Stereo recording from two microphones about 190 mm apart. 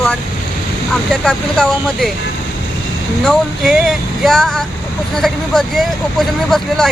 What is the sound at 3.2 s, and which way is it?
Speech, centre (ahead or behind).